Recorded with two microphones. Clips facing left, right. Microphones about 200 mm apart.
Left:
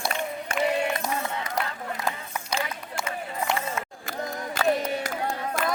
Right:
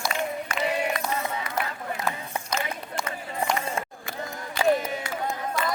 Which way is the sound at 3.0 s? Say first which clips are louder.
Left 1 dB; 5° left (ahead or behind).